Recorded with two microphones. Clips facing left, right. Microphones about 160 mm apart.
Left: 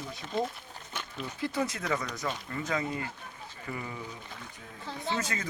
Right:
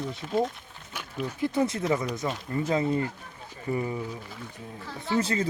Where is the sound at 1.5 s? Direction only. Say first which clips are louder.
Right 6 dB; 25° right (ahead or behind).